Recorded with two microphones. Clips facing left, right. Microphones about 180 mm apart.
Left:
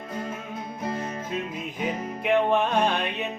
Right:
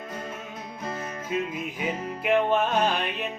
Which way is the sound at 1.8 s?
Centre (ahead or behind).